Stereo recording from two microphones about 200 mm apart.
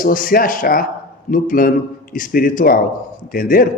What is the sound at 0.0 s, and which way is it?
A man's voice, 45° left (ahead or behind).